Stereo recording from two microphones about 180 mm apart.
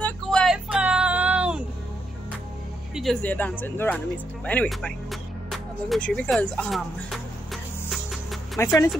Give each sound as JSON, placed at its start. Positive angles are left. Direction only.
{"t": 0.0, "sound": "a sound", "side_deg": 5}
{"t": 2.9, "sound": "speech", "side_deg": 0}
{"t": 7.9, "sound": "music", "side_deg": 0}
{"t": 8.6, "sound": "speech", "side_deg": 15}